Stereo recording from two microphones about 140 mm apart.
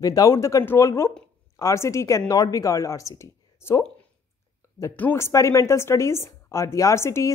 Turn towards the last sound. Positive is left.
turn(degrees=20)  # may be behind; listen again after turning